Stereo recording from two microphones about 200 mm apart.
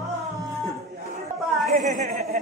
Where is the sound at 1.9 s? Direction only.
40° right (ahead or behind).